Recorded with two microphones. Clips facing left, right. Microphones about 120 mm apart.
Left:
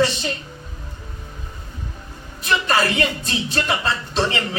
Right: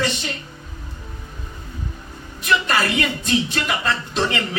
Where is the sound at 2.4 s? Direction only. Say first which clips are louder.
Even; 30° left (ahead or behind).